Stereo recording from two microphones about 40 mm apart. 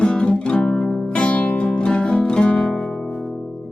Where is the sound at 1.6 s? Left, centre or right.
Left.